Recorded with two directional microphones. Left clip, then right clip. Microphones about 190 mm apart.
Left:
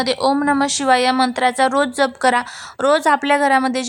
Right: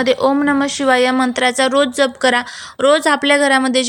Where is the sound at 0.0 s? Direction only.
15° right (ahead or behind).